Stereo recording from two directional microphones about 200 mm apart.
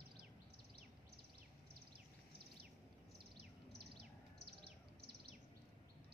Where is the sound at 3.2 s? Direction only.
55° right (ahead or behind).